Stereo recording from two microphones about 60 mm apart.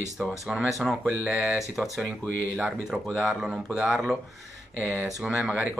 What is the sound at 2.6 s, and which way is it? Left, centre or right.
Speech, centre.